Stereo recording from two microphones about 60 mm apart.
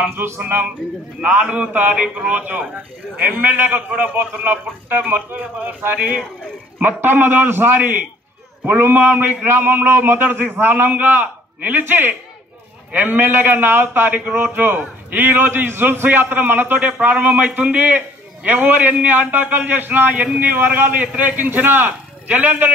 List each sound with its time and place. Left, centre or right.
0.1 s a man's voice: right
0.4 s a man's voice: right
1.2 s a man's voice: centre
1.8 s a man's voice: right